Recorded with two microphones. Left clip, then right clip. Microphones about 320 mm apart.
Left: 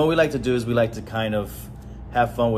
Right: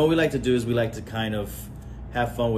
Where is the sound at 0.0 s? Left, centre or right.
Centre.